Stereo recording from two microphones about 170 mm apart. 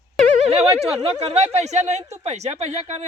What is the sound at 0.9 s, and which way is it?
Speech, 40° right (ahead or behind).